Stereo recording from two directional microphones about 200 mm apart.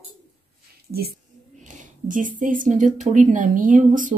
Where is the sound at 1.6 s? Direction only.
40° right (ahead or behind).